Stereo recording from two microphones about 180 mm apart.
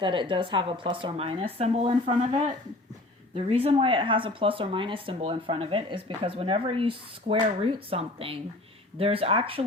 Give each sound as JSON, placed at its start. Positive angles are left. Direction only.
{"t": 0.0, "sound": "speech", "side_deg": -25}
{"t": 3.3, "sound": "speech", "side_deg": -30}